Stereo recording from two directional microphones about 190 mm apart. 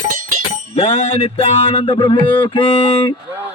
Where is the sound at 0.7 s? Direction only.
35° left (ahead or behind).